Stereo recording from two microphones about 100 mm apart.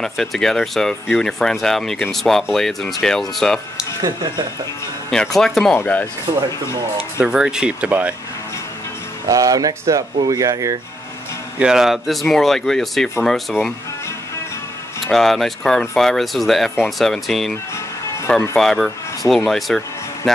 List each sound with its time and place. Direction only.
0.0 s speech: 5° left (ahead or behind)
4.0 s speech: 45° right (ahead or behind)
5.1 s speech: 5° left (ahead or behind)
5.8 s speech: 15° left (ahead or behind)
6.3 s speech: 50° right (ahead or behind)
7.2 s speech: 10° right (ahead or behind)
9.3 s speech: 40° right (ahead or behind)
11.6 s speech: 5° right (ahead or behind)
15.0 s speech: 5° left (ahead or behind)
18.6 s speech: centre (ahead or behind)